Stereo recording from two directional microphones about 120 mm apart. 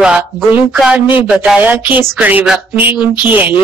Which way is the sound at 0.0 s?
5° right (ahead or behind).